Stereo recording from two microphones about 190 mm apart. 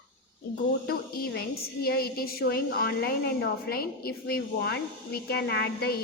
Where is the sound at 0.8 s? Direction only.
50° left (ahead or behind).